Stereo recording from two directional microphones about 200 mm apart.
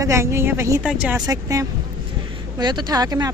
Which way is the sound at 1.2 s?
15° right (ahead or behind).